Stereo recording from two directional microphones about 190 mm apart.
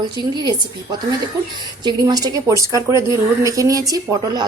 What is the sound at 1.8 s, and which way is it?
A woman's voice, 20° right (ahead or behind).